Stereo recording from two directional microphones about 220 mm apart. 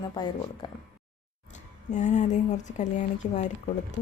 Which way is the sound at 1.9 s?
35° left (ahead or behind).